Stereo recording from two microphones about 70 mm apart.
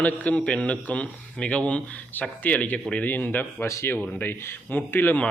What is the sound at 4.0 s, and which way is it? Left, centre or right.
Speech, left.